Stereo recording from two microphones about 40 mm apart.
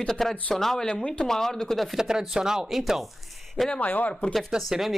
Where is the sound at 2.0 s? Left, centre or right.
Centre.